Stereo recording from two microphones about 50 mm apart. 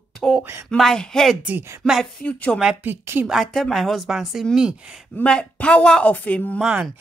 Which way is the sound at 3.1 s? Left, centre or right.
Right.